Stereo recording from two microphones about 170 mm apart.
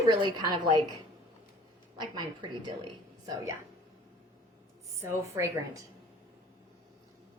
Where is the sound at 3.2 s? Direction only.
20° right (ahead or behind).